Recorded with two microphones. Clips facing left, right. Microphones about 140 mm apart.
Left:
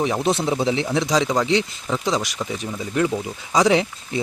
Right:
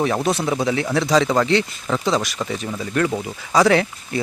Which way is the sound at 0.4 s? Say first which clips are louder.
Even; 25° left (ahead or behind).